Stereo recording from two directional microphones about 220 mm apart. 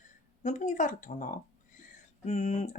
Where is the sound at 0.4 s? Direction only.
35° left (ahead or behind).